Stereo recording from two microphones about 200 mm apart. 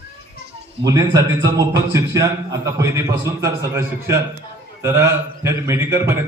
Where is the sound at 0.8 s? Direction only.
20° right (ahead or behind).